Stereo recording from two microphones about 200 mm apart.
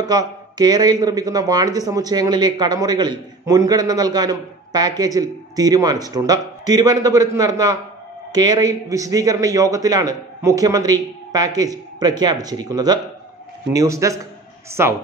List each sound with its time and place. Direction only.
0.0 s a man's voice: 20° right (ahead or behind)